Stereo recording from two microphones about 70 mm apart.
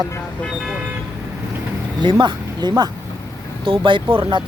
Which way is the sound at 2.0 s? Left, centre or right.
Right.